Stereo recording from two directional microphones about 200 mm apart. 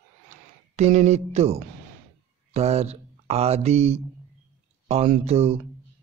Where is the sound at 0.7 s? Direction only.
35° right (ahead or behind).